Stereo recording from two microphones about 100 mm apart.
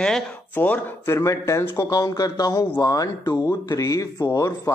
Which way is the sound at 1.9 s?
35° left (ahead or behind).